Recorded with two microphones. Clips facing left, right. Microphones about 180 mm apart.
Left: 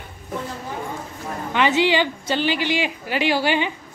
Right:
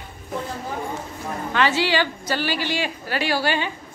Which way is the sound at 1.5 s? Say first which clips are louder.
Left 3 dB; 20° left (ahead or behind).